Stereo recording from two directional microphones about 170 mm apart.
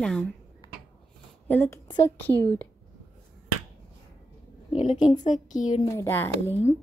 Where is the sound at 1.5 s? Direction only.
15° left (ahead or behind).